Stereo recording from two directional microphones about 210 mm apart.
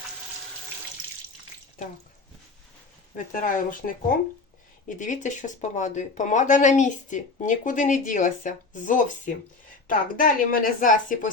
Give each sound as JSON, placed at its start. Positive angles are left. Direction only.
{"t": 1.8, "sound": "speech", "side_deg": 40}
{"t": 3.3, "sound": "speech", "side_deg": 40}